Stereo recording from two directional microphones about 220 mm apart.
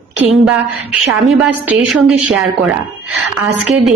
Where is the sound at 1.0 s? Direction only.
Centre (ahead or behind).